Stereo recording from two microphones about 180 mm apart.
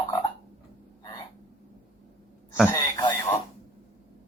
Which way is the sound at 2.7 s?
20° left (ahead or behind).